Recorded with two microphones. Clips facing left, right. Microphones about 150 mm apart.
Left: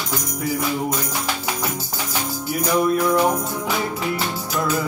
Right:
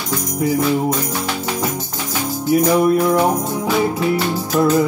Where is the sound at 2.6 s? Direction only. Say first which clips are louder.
Right 2 dB; 25° right (ahead or behind).